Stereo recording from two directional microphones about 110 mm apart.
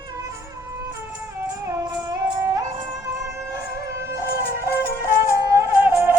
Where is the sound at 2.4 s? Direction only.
25° right (ahead or behind).